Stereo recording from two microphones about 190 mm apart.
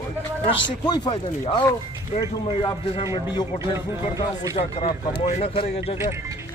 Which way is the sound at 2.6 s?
20° left (ahead or behind).